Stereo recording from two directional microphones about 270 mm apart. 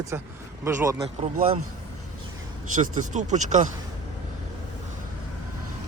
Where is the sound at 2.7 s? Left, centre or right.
Right.